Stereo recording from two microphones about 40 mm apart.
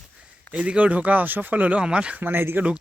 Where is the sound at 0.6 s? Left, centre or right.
Right.